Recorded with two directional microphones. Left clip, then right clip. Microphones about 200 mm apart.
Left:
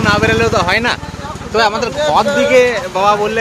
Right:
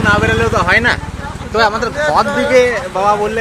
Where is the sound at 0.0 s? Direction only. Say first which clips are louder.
Even; 5° left (ahead or behind).